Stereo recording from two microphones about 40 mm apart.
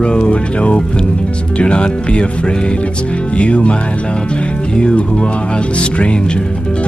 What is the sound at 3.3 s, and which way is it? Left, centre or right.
Speech, left.